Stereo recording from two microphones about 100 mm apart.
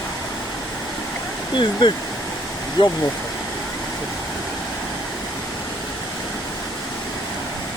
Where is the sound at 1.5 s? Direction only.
50° left (ahead or behind).